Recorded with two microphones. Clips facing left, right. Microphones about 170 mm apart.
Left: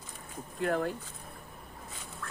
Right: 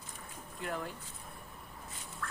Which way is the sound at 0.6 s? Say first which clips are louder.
Left 9 dB; 60° left (ahead or behind).